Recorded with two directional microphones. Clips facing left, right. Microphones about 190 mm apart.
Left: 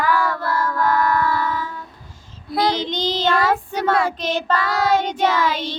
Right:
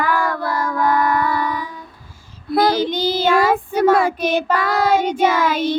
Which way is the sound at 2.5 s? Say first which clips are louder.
Right 4 dB; 55° right (ahead or behind).